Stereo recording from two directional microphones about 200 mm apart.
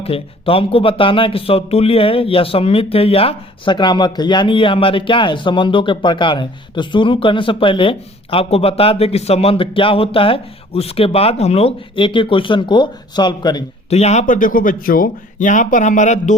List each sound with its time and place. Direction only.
0.0 s speech: 30° left (ahead or behind)
13.9 s speech: 35° left (ahead or behind)